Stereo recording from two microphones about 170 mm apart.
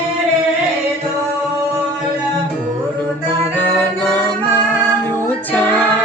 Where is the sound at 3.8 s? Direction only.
10° left (ahead or behind).